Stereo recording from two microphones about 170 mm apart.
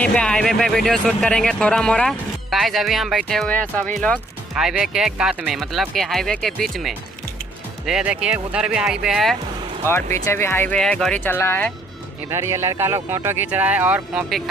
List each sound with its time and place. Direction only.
0.0 s speech: 5° left (ahead or behind)
4.6 s speech: 5° right (ahead or behind)
10.2 s speech: 15° left (ahead or behind)
12.3 s speech: 15° right (ahead or behind)